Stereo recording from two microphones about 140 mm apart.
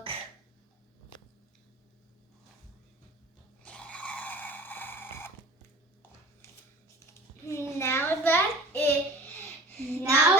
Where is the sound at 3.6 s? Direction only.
10° left (ahead or behind).